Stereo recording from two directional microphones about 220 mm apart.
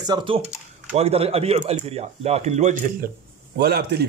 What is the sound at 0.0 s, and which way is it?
Speech, 20° right (ahead or behind).